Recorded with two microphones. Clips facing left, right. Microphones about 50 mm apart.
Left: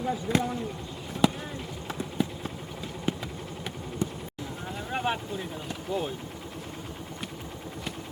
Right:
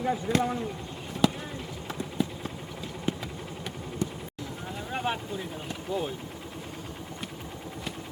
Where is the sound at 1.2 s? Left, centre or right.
Centre.